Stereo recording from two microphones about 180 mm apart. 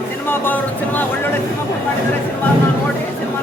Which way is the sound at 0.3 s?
10° left (ahead or behind).